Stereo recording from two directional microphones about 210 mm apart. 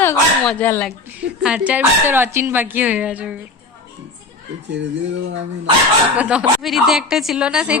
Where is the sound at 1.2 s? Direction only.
5° right (ahead or behind).